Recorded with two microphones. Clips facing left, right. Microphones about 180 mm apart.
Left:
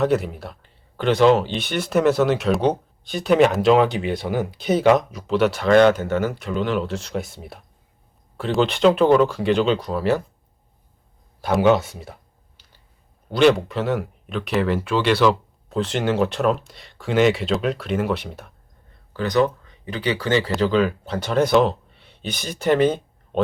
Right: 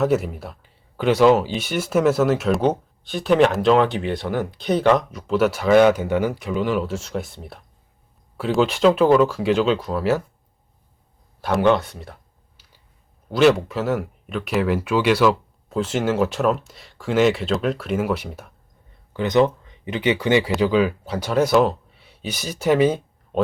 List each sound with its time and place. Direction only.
0.0 s speech: 5° right (ahead or behind)
11.3 s speech: centre (ahead or behind)
12.6 s a sound: 5° right (ahead or behind)
13.3 s speech: 5° right (ahead or behind)
19.1 s speech: 20° right (ahead or behind)